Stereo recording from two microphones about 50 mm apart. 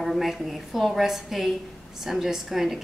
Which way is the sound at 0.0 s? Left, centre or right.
Centre.